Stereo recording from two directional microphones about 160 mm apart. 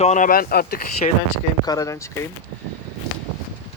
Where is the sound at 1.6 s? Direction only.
20° left (ahead or behind).